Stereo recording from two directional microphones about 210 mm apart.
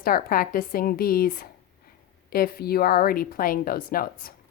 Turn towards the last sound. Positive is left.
turn(degrees=45)  # may be behind; listen again after turning